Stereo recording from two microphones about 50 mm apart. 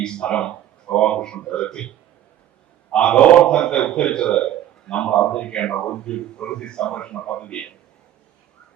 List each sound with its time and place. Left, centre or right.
0.0 s speech: centre
2.9 s a man's voice: centre